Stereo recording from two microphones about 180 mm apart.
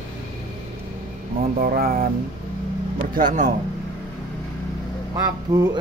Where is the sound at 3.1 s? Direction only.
45° right (ahead or behind).